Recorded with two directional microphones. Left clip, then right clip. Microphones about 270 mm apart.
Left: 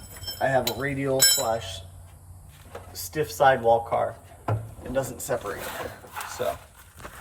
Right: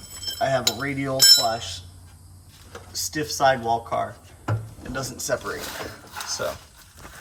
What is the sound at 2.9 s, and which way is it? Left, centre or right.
Speech, right.